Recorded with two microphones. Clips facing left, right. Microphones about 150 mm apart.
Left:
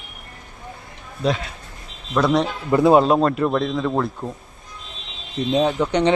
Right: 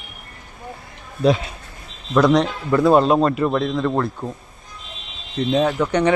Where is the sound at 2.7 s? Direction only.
20° left (ahead or behind).